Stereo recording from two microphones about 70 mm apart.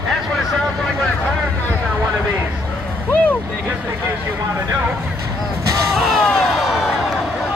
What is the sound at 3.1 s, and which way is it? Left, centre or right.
Vehicle, left.